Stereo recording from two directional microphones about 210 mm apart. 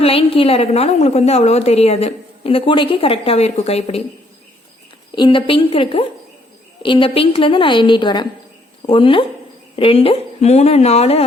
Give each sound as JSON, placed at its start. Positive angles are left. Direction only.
{"t": 0.0, "sound": "a woman's voice", "side_deg": 25}
{"t": 5.1, "sound": "a woman's voice", "side_deg": 25}